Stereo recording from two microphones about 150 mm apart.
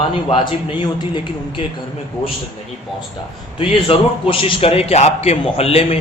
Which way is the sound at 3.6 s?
35° left (ahead or behind).